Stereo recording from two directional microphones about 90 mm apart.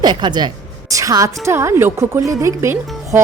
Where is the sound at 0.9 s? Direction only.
40° right (ahead or behind).